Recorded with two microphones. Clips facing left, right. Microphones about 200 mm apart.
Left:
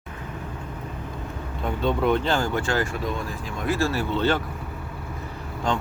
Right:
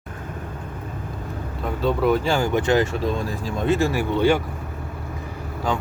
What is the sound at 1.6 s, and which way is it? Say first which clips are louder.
Speech: right 2 dB; centre (ahead or behind).